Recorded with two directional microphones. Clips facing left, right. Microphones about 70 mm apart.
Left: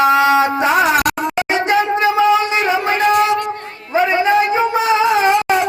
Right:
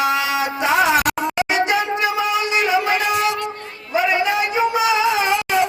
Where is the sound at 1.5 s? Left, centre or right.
Left.